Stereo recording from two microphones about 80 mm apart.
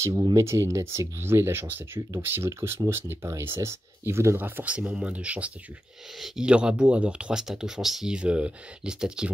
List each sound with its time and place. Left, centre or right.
0.3 s speech: right
4.4 s speech: right